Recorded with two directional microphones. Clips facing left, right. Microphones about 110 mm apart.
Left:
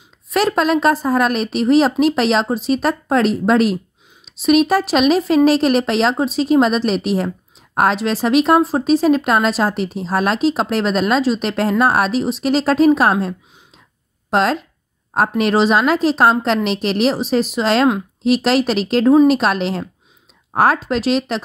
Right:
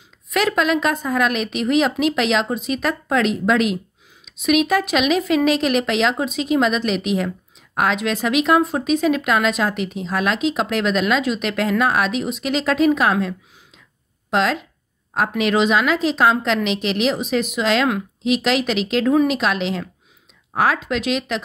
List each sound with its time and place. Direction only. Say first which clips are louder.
0.3 s speech: left 3 dB; 35° left (ahead or behind)